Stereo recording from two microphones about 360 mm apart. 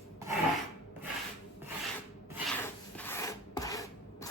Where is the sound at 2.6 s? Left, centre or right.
Centre.